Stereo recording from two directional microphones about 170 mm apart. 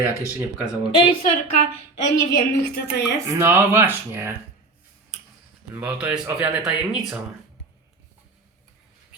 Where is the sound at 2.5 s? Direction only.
85° left.